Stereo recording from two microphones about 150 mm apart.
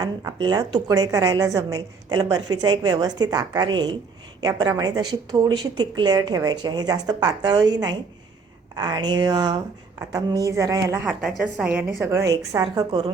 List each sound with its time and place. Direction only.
0.0 s a woman's voice: 25° right (ahead or behind)
11.2 s a woman's voice: 5° right (ahead or behind); by 13.0 s 25° right (ahead or behind)